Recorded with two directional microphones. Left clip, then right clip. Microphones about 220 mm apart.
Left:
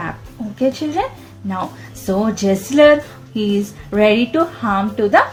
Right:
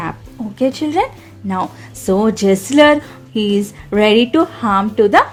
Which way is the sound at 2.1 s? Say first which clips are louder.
Right 4 dB; 50° right (ahead or behind).